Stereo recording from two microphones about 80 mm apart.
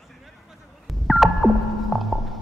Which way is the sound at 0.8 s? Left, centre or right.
Centre.